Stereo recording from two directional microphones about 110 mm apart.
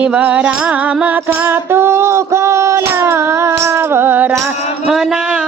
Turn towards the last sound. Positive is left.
turn(degrees=-5)  # may be behind; listen again after turning